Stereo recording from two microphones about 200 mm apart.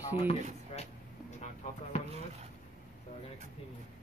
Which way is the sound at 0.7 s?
35° left (ahead or behind).